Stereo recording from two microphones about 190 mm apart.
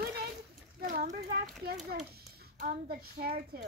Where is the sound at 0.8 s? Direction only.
45° right (ahead or behind).